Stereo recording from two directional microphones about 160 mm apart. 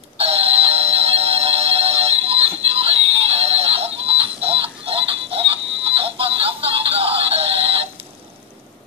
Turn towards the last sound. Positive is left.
turn(degrees=-35)  # may be behind; listen again after turning